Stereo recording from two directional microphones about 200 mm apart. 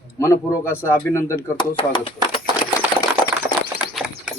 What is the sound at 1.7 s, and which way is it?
Speech, 25° left (ahead or behind).